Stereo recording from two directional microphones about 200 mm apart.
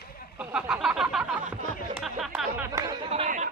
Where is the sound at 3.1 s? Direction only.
35° right (ahead or behind).